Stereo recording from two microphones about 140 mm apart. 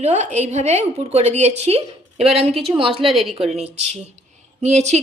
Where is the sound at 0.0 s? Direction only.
50° right (ahead or behind).